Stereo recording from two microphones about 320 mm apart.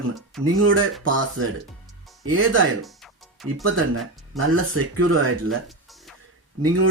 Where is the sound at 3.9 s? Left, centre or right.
Right.